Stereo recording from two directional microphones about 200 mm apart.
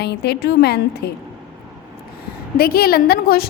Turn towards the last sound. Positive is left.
turn(degrees=50)  # may be behind; listen again after turning